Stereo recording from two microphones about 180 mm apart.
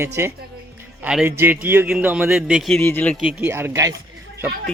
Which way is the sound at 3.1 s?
5° right (ahead or behind).